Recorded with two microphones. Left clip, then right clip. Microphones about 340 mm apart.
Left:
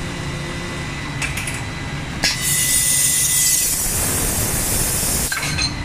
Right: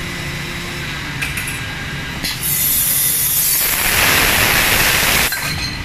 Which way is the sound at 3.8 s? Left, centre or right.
Right.